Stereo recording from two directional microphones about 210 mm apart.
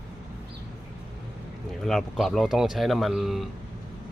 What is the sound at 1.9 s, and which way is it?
Speech, centre (ahead or behind).